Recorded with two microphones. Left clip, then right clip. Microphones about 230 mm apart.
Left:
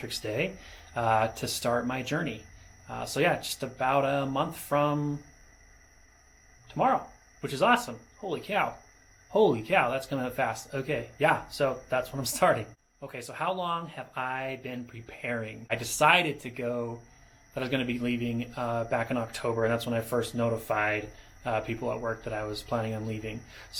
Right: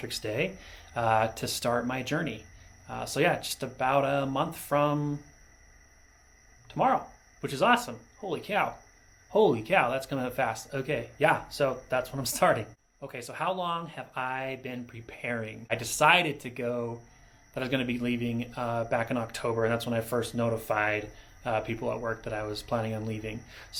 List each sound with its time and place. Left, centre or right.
0.0 s speech: right
6.7 s speech: right